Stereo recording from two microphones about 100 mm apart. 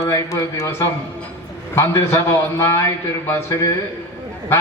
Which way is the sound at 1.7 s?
25° left (ahead or behind).